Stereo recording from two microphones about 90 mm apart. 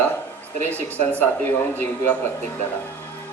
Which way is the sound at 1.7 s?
20° left (ahead or behind).